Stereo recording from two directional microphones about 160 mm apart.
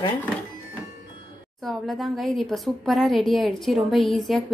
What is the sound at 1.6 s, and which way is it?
A woman's voice, centre (ahead or behind).